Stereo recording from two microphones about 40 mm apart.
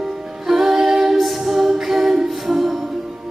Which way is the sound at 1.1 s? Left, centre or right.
Centre.